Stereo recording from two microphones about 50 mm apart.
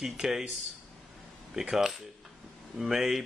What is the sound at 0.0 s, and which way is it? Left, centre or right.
Speech, centre.